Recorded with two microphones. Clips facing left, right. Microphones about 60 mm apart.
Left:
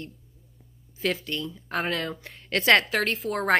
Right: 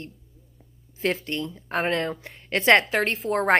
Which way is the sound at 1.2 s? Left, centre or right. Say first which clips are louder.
Right 2 dB; right.